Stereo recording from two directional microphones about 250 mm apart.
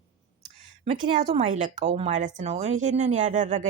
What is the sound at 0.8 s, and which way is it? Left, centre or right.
Speech, right.